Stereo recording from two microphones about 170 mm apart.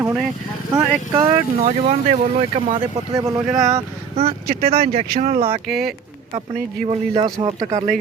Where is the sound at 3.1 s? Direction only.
20° right (ahead or behind).